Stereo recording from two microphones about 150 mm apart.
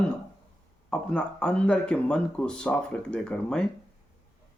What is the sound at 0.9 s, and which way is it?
Speech, 5° left (ahead or behind).